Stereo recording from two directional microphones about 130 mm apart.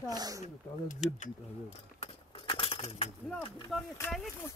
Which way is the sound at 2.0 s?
45° left (ahead or behind).